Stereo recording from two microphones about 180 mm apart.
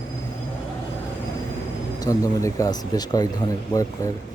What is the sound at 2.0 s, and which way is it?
Speech, 20° left (ahead or behind).